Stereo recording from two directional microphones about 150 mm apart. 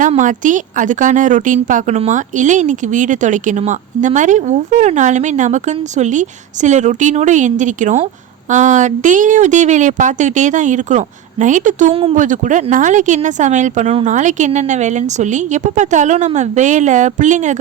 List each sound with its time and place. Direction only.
0.2 s speech: 60° right (ahead or behind)
11.9 s speech: 40° right (ahead or behind)
12.1 s speech: 60° right (ahead or behind)